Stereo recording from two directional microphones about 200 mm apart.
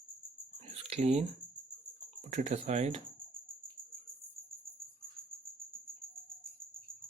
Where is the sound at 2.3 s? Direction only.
35° right (ahead or behind).